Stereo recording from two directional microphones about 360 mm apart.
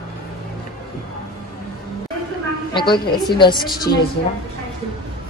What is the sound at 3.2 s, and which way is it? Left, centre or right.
Music, centre.